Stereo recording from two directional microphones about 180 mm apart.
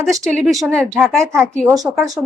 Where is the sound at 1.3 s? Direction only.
15° right (ahead or behind).